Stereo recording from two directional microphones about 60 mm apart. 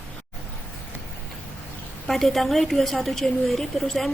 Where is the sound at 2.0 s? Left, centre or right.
Centre.